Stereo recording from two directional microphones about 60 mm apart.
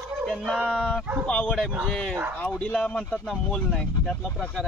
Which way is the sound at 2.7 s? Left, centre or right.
Centre.